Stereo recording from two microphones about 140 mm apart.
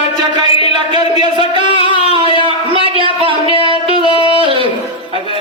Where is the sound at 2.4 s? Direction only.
40° right (ahead or behind).